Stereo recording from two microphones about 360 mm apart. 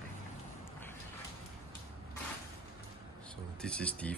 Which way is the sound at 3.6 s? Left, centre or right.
Centre.